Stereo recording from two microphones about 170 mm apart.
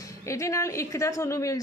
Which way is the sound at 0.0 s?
20° left (ahead or behind).